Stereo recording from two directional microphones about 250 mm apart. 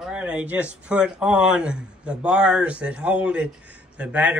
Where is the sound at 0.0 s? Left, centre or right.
Centre.